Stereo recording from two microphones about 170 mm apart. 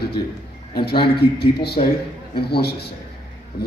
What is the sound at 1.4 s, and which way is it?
Speech, 70° left (ahead or behind).